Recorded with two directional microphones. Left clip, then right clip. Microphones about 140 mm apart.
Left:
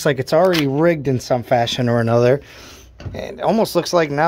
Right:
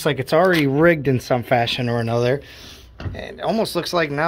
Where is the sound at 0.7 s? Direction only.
10° left (ahead or behind).